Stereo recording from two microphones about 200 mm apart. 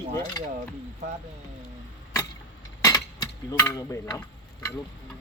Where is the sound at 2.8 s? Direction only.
20° left (ahead or behind).